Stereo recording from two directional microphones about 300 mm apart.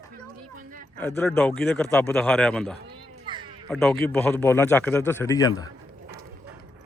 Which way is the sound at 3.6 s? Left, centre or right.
Centre.